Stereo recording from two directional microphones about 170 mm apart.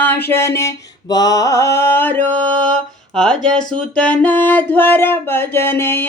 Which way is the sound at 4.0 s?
10° left (ahead or behind).